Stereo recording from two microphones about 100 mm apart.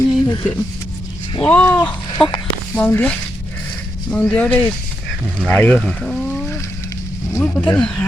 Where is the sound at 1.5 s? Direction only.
20° left (ahead or behind).